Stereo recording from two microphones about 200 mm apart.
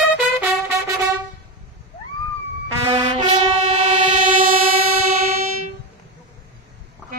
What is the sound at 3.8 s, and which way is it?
Train, 40° right (ahead or behind).